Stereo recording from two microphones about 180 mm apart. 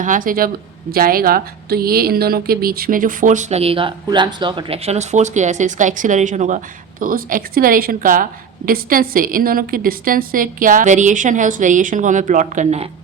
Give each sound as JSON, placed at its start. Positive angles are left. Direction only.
{"t": 0.0, "sound": "a woman's voice", "side_deg": -45}